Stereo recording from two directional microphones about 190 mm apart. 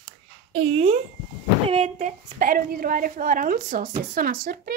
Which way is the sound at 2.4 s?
50° right (ahead or behind).